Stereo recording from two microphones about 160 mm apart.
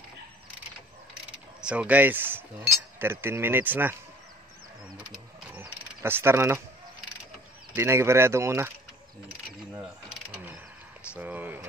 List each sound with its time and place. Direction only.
1.6 s speech: 5° right (ahead or behind)
5.1 s mechanisms: 10° right (ahead or behind)
7.7 s speech: 15° right (ahead or behind)
10.0 s mechanisms: 5° right (ahead or behind)
11.1 s a sound: 10° right (ahead or behind)